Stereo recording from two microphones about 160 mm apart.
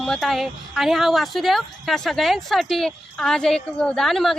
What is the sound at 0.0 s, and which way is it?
Speech, centre (ahead or behind).